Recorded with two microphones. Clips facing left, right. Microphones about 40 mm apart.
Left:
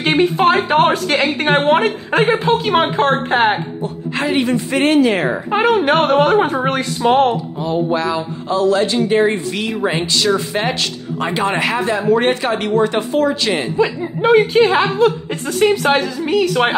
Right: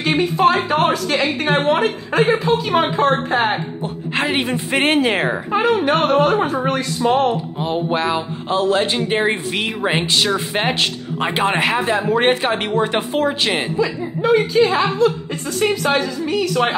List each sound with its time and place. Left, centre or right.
0.0 s a woman's voice: left
3.8 s speech: right
5.5 s a woman's voice: left
7.6 s speech: right
13.7 s a woman's voice: left